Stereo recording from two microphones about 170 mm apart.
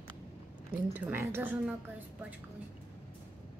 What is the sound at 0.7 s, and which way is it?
A woman's voice, 10° right (ahead or behind).